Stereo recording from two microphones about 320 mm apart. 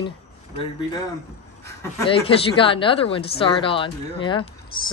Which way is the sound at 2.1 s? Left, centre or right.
Centre.